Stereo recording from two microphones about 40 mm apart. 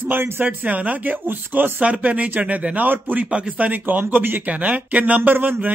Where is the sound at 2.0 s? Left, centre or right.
Right.